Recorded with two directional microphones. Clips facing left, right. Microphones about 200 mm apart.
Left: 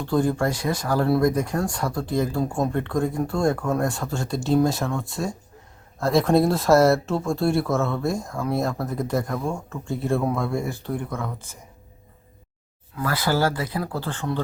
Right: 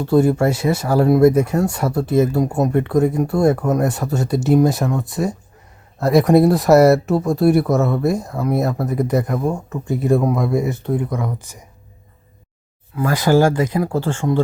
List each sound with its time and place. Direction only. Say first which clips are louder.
0.1 s speech: right 7 dB; 25° right (ahead or behind)
8.3 s speech: right 5 dB; 5° right (ahead or behind)
9.3 s speech: right 6 dB; 15° right (ahead or behind)
13.0 s speech: right 8 dB; 15° right (ahead or behind)